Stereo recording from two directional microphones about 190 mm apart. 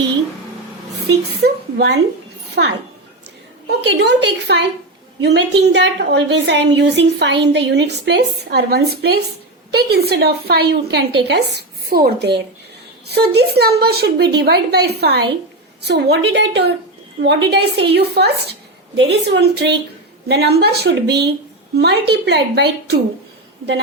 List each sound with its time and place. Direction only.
1.4 s a woman's voice: 60° right (ahead or behind)
3.8 s a woman's voice: 65° right (ahead or behind)